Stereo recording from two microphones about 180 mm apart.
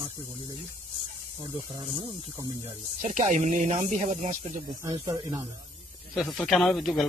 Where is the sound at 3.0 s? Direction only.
40° right (ahead or behind).